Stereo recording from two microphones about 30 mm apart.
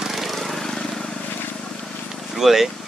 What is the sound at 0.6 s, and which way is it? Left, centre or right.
Vehicle, centre.